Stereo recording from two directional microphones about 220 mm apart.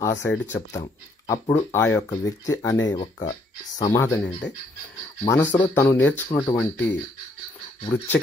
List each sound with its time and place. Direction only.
0.1 s speech: 55° left (ahead or behind)
0.5 s speech: 15° left (ahead or behind)